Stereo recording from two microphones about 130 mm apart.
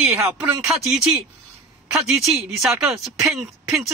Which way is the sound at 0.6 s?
5° right (ahead or behind).